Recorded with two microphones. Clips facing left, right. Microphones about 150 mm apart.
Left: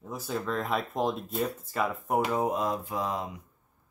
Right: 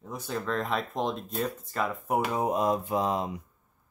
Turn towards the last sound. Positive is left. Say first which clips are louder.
# right 4 dB
turn(degrees=-25)  # may be behind; listen again after turning